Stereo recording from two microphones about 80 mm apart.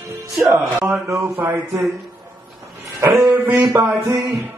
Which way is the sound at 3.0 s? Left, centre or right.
Right.